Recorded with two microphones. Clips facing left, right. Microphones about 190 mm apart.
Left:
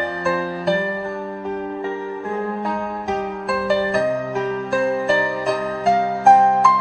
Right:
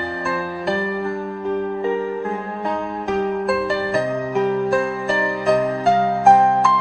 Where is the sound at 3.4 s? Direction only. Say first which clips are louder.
Even; centre (ahead or behind).